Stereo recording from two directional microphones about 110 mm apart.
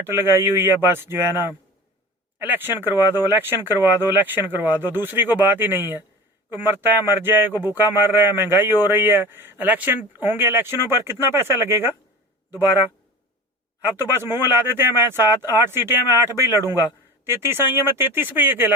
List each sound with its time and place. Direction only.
0.0 s speech: 20° right (ahead or behind)